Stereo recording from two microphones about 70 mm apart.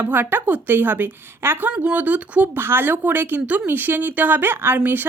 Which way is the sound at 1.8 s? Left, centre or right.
Right.